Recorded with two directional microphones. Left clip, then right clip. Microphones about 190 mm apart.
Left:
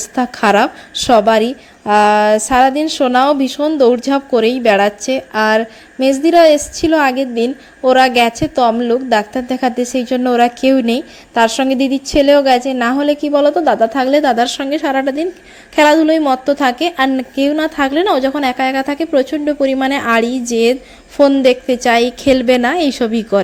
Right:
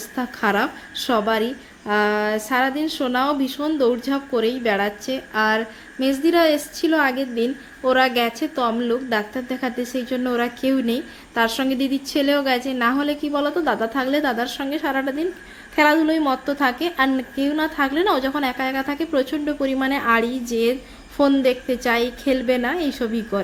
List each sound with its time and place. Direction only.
0.0 s a woman's voice: 40° left (ahead or behind)